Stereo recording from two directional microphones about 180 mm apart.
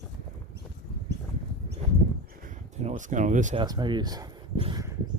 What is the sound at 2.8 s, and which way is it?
Speech, 40° right (ahead or behind).